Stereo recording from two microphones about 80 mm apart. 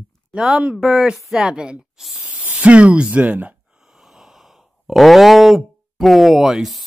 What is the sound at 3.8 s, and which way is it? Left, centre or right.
Speech, centre.